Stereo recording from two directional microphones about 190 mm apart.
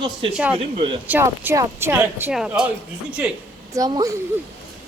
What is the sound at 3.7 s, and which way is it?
Speech, 20° right (ahead or behind).